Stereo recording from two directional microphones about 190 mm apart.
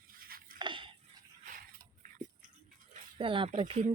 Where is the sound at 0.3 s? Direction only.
50° right (ahead or behind).